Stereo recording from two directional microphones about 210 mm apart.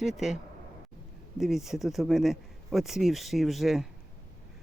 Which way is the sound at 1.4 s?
Centre (ahead or behind).